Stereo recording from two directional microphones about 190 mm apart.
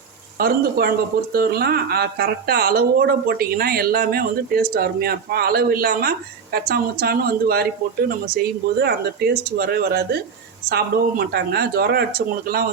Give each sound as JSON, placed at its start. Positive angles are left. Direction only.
{"t": 0.3, "sound": "speech", "side_deg": -50}